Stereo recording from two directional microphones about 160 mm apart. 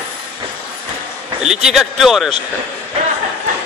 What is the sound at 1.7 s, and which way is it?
Speech, centre (ahead or behind).